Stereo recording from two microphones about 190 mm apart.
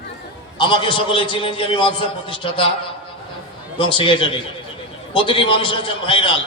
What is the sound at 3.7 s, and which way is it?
A man's voice, 25° left (ahead or behind).